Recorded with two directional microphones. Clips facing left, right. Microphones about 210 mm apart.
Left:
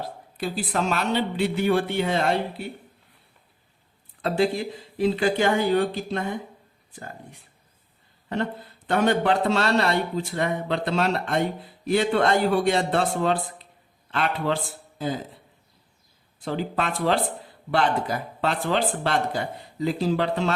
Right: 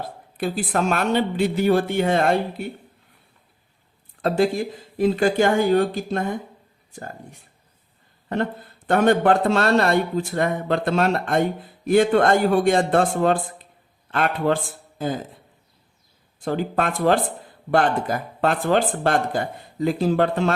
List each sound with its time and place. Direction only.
0.3 s a man's voice: 50° right (ahead or behind)
4.2 s a man's voice: 45° right (ahead or behind)
8.9 s a man's voice: 50° right (ahead or behind)
16.4 s a man's voice: 50° right (ahead or behind)